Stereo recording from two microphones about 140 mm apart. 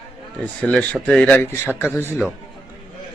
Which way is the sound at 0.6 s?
10° left (ahead or behind).